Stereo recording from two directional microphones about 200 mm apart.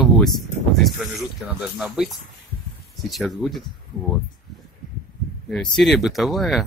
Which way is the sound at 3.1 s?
Centre (ahead or behind).